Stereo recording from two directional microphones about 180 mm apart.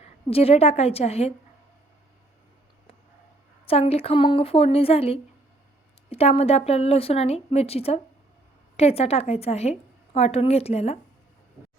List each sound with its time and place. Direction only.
0.0 s a woman's voice: 35° left (ahead or behind)
3.7 s a woman's voice: 35° left (ahead or behind)